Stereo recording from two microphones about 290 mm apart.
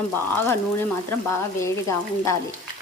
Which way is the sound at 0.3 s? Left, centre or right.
Centre.